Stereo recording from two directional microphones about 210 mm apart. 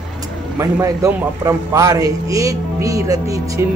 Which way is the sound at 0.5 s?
15° right (ahead or behind).